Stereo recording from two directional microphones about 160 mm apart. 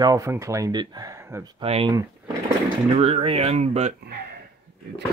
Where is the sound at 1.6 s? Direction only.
35° right (ahead or behind).